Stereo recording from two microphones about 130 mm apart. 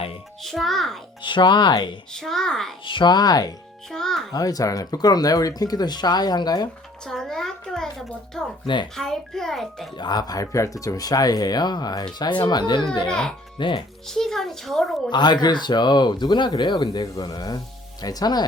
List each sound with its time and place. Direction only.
0.4 s a woman's voice: centre (ahead or behind)
1.2 s speech: 35° left (ahead or behind)
2.1 s a woman's voice: 5° left (ahead or behind)
2.8 s speech: 35° left (ahead or behind)
3.8 s a woman's voice: 5° left (ahead or behind)
4.3 s speech: 30° left (ahead or behind)
7.0 s a woman's voice: 5° left (ahead or behind)
8.6 s speech: 35° left (ahead or behind)
9.0 s a woman's voice: 5° left (ahead or behind)
10.0 s speech: 30° left (ahead or behind)
13.1 s a woman's voice: 5° left (ahead or behind)
13.6 s speech: 40° left (ahead or behind)
14.1 s a woman's voice: 5° left (ahead or behind)
15.1 s speech: 35° left (ahead or behind)